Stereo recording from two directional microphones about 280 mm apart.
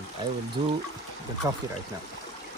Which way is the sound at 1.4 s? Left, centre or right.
Centre.